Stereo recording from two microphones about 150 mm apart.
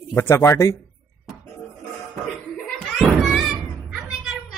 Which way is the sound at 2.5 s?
Centre (ahead or behind).